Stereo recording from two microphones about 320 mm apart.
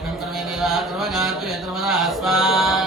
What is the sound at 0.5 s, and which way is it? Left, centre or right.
Mantra, centre.